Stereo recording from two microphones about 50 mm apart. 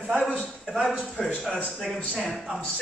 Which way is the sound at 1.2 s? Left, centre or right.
Centre.